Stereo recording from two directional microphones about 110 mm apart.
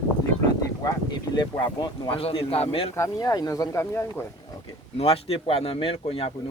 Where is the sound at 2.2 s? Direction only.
60° left (ahead or behind).